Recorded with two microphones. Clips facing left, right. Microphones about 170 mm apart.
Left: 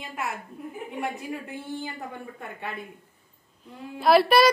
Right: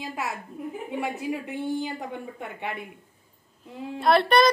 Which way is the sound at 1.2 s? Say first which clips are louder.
Right 5 dB; 20° right (ahead or behind).